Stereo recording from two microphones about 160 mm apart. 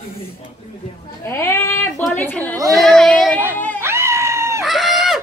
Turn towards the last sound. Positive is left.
turn(degrees=0)  # may be behind; listen again after turning